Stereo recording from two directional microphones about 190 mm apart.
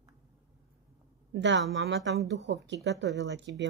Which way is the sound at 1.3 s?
65° right (ahead or behind).